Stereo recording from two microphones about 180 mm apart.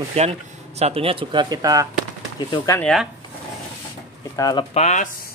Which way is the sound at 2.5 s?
15° left (ahead or behind).